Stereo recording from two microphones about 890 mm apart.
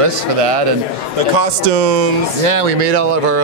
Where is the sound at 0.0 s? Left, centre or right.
Right.